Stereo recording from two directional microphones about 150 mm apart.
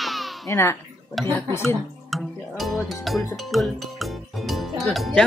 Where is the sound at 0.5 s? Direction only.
15° left (ahead or behind).